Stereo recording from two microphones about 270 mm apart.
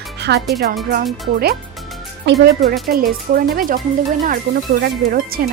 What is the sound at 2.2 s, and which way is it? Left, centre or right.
Speech, right.